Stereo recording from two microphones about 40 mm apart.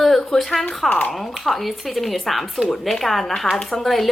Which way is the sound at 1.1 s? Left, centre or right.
Centre.